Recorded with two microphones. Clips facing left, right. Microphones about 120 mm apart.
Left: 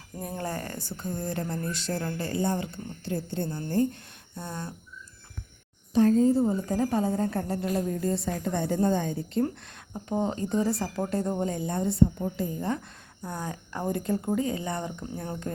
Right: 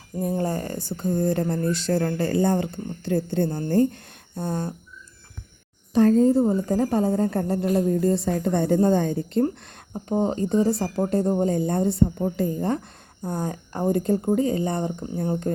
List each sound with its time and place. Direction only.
0.2 s speech: 25° right (ahead or behind)
1.2 s a woman's voice: 40° right (ahead or behind)
1.9 s speech: 55° right (ahead or behind)
4.4 s a woman's voice: 40° right (ahead or behind)
6.1 s a woman's voice: 50° right (ahead or behind)
9.9 s a woman's voice: 30° right (ahead or behind)